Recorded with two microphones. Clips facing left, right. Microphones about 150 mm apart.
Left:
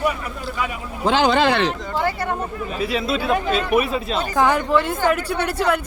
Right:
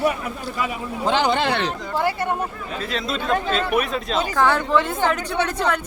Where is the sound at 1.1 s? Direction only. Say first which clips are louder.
Left 3 dB; 90° left.